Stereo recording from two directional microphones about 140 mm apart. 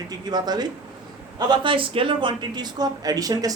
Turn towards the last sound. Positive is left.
turn(degrees=-25)  # may be behind; listen again after turning